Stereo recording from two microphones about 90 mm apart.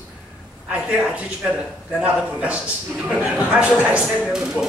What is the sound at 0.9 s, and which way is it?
A man's voice, 15° right (ahead or behind).